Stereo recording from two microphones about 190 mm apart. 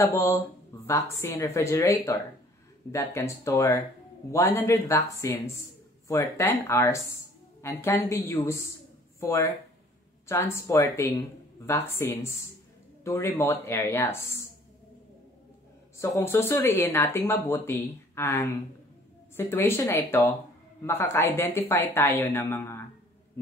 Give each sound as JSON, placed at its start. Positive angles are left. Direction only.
{"t": 0.0, "sound": "speech", "side_deg": 15}
{"t": 16.0, "sound": "speech", "side_deg": 15}